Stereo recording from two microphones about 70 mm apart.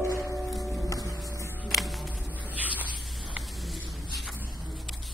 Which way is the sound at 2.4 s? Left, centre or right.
Right.